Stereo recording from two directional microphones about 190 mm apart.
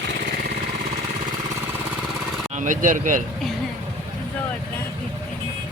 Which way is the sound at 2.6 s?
45° right (ahead or behind).